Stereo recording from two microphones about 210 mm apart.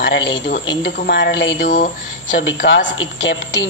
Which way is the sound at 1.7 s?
40° left (ahead or behind).